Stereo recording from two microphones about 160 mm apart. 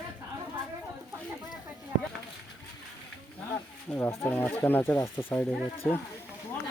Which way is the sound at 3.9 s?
15° left (ahead or behind).